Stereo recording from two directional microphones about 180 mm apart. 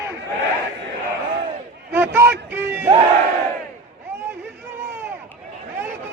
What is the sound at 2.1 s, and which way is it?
Speech, 10° right (ahead or behind).